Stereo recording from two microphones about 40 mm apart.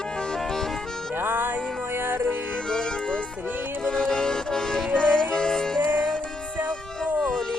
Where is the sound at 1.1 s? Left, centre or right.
Right.